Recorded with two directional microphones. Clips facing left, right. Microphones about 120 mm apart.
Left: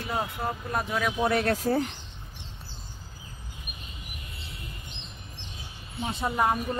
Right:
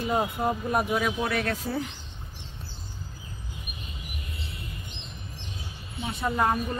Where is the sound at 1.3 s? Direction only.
35° left (ahead or behind).